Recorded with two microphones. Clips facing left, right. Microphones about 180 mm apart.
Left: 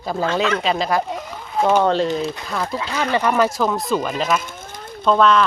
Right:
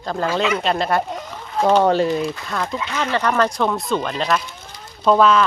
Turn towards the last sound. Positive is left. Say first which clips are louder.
# right 1 dB
turn(degrees=-5)  # may be behind; listen again after turning